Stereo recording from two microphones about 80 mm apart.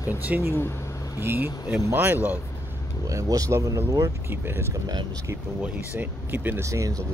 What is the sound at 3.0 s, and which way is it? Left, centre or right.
Speech, right.